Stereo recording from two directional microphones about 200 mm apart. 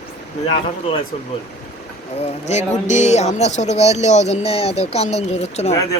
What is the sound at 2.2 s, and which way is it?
Speech, 35° left (ahead or behind).